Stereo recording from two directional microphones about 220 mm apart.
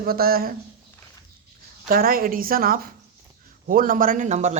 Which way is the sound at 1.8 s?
40° right (ahead or behind).